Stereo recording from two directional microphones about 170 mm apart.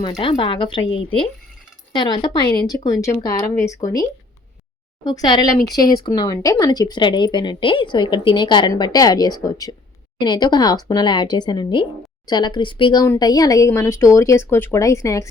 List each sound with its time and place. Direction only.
0.0 s speech: 30° left (ahead or behind)
1.9 s speech: 25° left (ahead or behind)
5.0 s a woman's voice: 25° left (ahead or behind)